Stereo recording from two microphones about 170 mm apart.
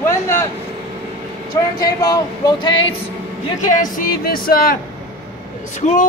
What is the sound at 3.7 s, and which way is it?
Music, 55° left (ahead or behind).